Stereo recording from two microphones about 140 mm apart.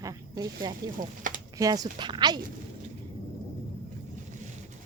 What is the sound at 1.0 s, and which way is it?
Speech, 70° right (ahead or behind).